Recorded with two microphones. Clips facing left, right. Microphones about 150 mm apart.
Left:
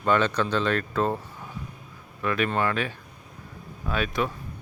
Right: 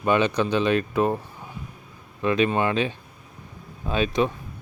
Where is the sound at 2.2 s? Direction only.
20° right (ahead or behind).